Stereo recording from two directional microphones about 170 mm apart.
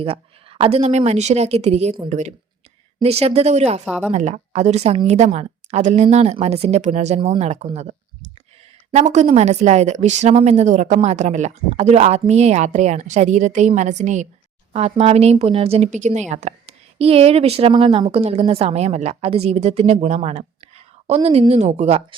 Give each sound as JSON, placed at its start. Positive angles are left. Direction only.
{"t": 0.0, "sound": "speech", "side_deg": -35}
{"t": 3.8, "sound": "a woman's voice", "side_deg": 5}
{"t": 4.1, "sound": "a woman's voice", "side_deg": -40}